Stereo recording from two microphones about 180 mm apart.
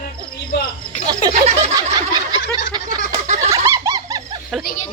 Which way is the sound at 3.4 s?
15° right (ahead or behind).